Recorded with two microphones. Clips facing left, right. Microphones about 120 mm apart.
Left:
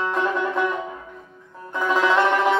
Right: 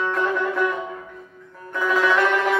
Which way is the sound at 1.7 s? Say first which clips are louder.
Even; 20° left (ahead or behind).